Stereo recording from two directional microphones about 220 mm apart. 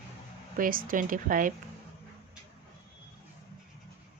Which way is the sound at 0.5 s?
40° right (ahead or behind).